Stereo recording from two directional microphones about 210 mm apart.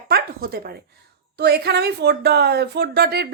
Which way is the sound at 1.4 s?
50° right (ahead or behind).